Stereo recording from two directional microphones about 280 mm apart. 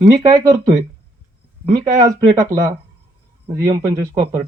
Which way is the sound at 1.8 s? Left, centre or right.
Centre.